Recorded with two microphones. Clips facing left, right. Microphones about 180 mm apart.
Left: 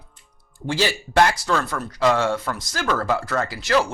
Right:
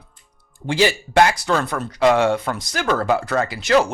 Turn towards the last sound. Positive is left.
turn(degrees=-20)  # may be behind; listen again after turning